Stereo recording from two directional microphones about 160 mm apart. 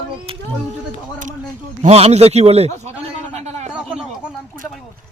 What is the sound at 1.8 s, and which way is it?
Speech, 45° right (ahead or behind).